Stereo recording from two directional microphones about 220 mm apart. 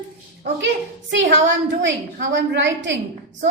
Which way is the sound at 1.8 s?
55° right (ahead or behind).